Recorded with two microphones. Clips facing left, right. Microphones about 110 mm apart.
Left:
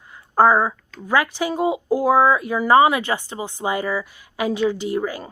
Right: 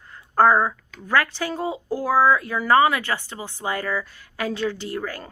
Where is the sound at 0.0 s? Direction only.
10° left (ahead or behind).